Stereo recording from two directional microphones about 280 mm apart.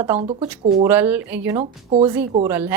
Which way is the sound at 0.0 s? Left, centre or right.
Centre.